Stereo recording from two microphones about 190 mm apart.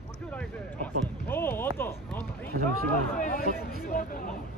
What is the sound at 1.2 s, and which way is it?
Speech, 10° left (ahead or behind).